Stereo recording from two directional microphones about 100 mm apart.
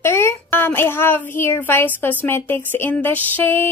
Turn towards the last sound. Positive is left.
turn(degrees=20)  # may be behind; listen again after turning